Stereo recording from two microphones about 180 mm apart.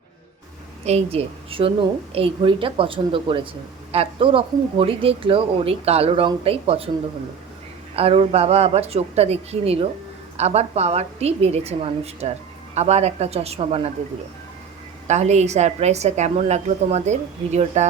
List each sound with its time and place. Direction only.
0.9 s speech: 35° right (ahead or behind)
7.9 s speech: 35° right (ahead or behind)
15.0 s speech: 40° right (ahead or behind)